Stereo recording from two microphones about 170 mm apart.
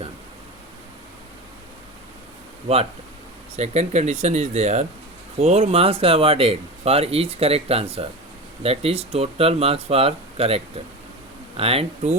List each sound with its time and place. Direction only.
3.6 s speech: 40° right (ahead or behind)